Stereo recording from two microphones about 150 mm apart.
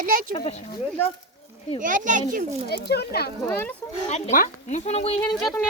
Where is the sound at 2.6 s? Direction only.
90° left.